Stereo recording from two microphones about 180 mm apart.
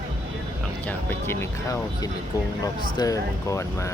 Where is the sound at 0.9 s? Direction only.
15° left (ahead or behind).